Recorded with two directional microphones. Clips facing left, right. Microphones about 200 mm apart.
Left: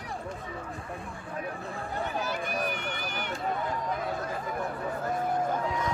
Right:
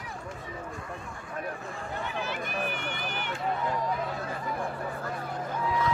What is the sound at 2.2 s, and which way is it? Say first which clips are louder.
Run: even; 40° left (ahead or behind).